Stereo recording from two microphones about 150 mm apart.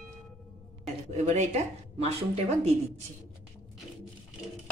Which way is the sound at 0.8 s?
50° right (ahead or behind).